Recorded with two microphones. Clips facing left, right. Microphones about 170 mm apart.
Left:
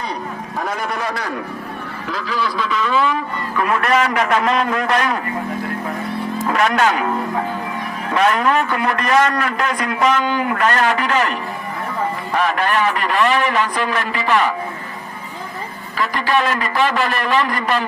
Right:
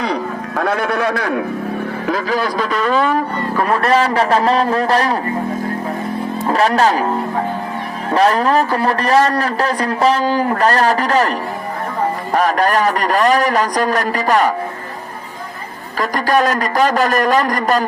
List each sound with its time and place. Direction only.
0.0 s a man's voice: 90° right; by 1.5 s 70° right (ahead or behind)
2.0 s a man's voice: 50° right (ahead or behind)
6.4 s speech: 35° right (ahead or behind)
8.1 s a man's voice: 35° right (ahead or behind)
16.0 s a man's voice: 40° right (ahead or behind)